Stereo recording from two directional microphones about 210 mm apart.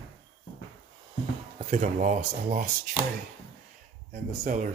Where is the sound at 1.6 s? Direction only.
35° right (ahead or behind).